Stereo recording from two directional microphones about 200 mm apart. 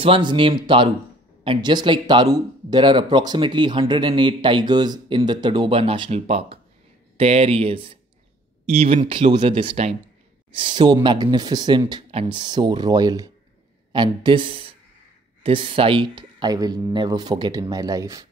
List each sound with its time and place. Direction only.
0.0 s speech: 25° right (ahead or behind)